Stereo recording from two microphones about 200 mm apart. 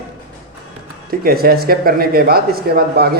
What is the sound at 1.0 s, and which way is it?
Speech, 50° right (ahead or behind).